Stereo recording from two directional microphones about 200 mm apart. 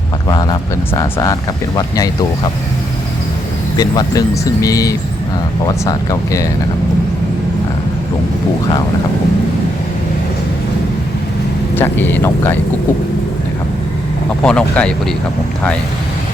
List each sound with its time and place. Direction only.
0.3 s speech: 20° left (ahead or behind)
3.8 s speech: 20° left (ahead or behind)
11.7 s speech: 10° left (ahead or behind)
14.4 s speech: 5° left (ahead or behind)